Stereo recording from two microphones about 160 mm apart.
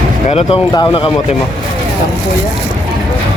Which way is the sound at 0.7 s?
30° left (ahead or behind).